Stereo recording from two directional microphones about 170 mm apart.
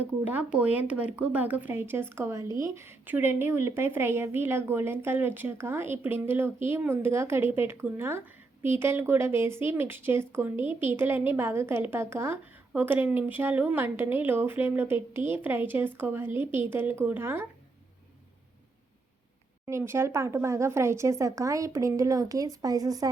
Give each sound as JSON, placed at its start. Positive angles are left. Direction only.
{"t": 0.0, "sound": "a woman's voice", "side_deg": -10}
{"t": 19.6, "sound": "a woman's voice", "side_deg": -15}